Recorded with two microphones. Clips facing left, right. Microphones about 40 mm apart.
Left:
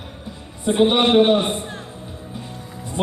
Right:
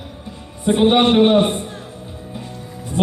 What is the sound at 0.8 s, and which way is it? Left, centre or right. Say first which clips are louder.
Speech: right 1 dB; centre.